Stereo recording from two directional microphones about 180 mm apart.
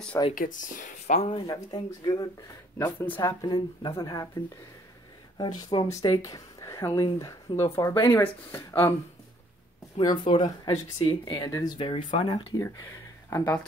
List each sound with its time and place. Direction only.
0.3 s speech: 50° left (ahead or behind); by 4.3 s 20° left (ahead or behind)
5.7 s speech: 20° left (ahead or behind)
9.9 s speech: 25° left (ahead or behind)
13.3 s speech: 15° left (ahead or behind)